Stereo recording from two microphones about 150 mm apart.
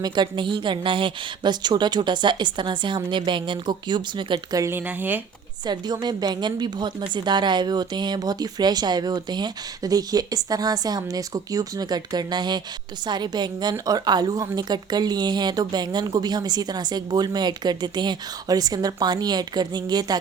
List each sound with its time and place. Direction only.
0.0 s a woman's voice: 30° right (ahead or behind)
4.6 s speech: 15° right (ahead or behind)
5.6 s a woman's voice: 30° right (ahead or behind)